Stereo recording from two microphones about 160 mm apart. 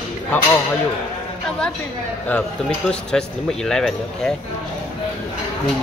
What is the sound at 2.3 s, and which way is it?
Speech, 5° left (ahead or behind).